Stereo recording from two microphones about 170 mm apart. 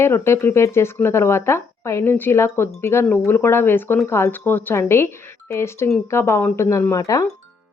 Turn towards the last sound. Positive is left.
turn(degrees=20)  # may be behind; listen again after turning